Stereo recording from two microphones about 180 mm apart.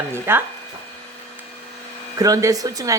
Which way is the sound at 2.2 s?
20° right (ahead or behind).